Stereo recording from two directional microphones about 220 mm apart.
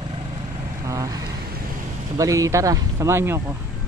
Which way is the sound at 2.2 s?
15° right (ahead or behind).